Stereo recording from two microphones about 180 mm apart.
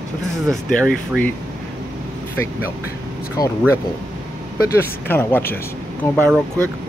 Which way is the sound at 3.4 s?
20° left (ahead or behind).